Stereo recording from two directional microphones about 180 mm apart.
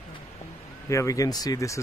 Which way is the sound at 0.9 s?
15° left (ahead or behind).